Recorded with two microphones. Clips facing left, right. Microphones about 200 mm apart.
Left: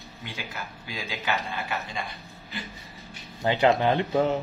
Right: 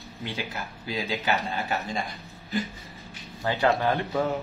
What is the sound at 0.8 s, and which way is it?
A man's voice, 35° right (ahead or behind).